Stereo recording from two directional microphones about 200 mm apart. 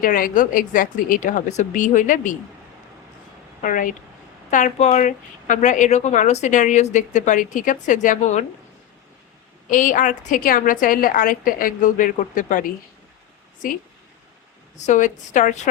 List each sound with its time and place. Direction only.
0.0 s speech: 45° left (ahead or behind)
3.6 s speech: 40° left (ahead or behind)
9.6 s a woman's voice: 40° left (ahead or behind)
14.8 s speech: 35° left (ahead or behind)